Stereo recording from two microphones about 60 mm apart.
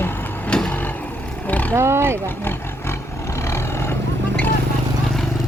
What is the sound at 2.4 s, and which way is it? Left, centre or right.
Roar, left.